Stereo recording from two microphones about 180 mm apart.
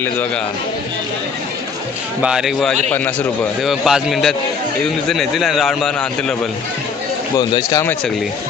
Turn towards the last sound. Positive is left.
turn(degrees=20)  # may be behind; listen again after turning